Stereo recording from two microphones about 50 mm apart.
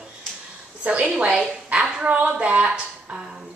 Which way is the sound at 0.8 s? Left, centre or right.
Right.